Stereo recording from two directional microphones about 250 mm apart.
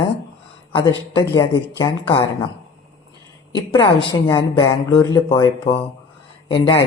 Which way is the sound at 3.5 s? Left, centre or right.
Centre.